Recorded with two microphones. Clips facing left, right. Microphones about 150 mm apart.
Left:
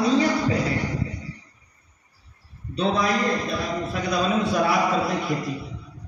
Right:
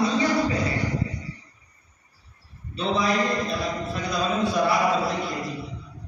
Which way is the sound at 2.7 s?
45° left (ahead or behind).